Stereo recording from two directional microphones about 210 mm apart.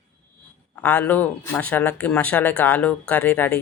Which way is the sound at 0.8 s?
5° left (ahead or behind).